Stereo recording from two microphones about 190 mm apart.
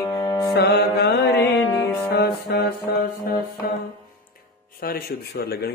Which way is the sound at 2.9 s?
50° left (ahead or behind).